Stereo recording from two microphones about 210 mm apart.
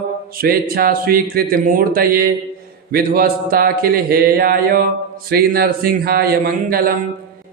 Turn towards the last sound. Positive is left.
turn(degrees=-45)  # may be behind; listen again after turning